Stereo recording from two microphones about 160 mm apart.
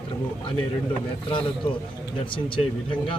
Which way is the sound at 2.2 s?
30° left (ahead or behind).